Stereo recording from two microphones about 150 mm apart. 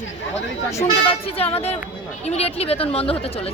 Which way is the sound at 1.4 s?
40° left (ahead or behind).